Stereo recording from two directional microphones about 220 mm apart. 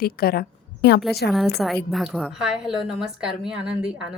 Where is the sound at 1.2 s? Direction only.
Centre (ahead or behind).